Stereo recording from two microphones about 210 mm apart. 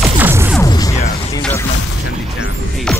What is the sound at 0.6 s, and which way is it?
Music, 15° left (ahead or behind).